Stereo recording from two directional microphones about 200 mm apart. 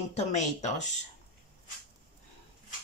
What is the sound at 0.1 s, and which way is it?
Speech, 35° left (ahead or behind).